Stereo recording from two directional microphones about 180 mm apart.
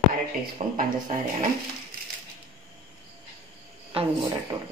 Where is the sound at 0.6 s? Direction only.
40° right (ahead or behind).